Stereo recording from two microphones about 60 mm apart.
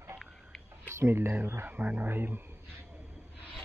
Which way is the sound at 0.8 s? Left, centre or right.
Right.